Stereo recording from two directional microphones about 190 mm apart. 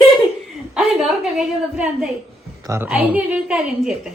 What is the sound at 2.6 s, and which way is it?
A woman's voice, 15° right (ahead or behind).